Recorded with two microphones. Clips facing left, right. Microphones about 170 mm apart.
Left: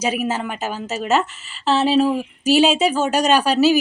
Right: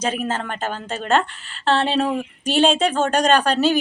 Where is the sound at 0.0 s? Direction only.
10° left (ahead or behind).